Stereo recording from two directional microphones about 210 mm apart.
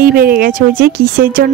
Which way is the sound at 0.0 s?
45° right (ahead or behind).